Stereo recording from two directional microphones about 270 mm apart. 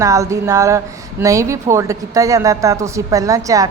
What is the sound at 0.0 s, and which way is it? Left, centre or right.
A woman's voice, centre.